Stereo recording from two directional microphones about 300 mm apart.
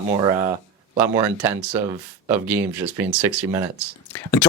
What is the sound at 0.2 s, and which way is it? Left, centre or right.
Speech, centre.